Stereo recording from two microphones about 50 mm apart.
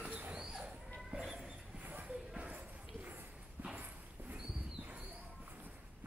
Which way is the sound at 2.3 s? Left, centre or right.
Right.